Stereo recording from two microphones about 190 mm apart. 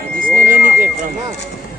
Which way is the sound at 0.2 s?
45° right (ahead or behind).